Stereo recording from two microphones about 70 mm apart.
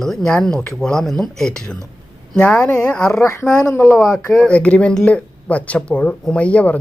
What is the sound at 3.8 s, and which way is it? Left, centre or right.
Speech, centre.